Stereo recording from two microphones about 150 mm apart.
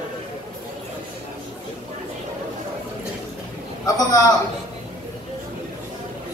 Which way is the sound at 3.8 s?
25° left (ahead or behind).